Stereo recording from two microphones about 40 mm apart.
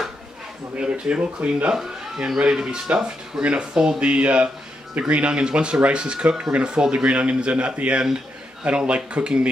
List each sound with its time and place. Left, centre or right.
0.7 s speech: right
1.7 s speech: centre